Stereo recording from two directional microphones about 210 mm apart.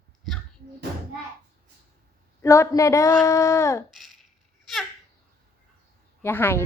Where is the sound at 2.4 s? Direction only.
15° left (ahead or behind).